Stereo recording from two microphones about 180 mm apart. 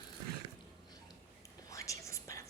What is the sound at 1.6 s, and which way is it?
Whispering, 20° left (ahead or behind).